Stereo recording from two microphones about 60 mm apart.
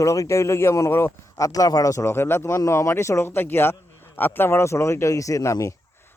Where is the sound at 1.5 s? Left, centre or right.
Left.